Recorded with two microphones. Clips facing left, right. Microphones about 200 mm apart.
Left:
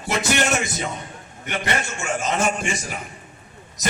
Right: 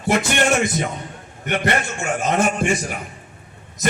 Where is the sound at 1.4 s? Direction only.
55° right (ahead or behind).